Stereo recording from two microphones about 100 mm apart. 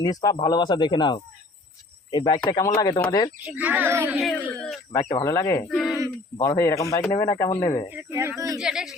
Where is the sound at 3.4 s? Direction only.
15° right (ahead or behind).